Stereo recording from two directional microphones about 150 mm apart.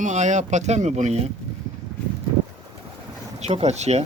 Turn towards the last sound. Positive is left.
turn(degrees=-45)  # may be behind; listen again after turning